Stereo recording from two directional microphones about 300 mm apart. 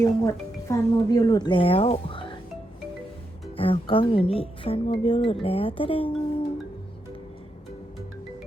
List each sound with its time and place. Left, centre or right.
0.0 s speech: centre
3.6 s speech: centre